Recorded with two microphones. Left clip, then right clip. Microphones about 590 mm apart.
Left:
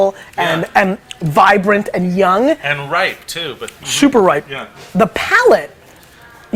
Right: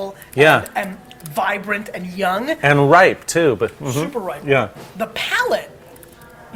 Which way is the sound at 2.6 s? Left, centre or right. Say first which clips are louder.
Right 5 dB; right.